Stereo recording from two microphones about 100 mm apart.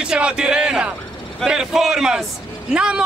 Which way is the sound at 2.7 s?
10° right (ahead or behind).